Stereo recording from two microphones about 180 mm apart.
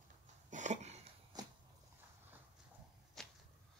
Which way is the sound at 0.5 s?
40° right (ahead or behind).